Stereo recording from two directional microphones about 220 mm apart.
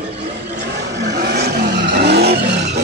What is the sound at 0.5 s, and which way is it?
Vehicle, 45° right (ahead or behind).